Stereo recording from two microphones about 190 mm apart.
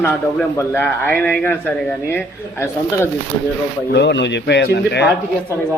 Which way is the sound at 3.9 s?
65° left (ahead or behind).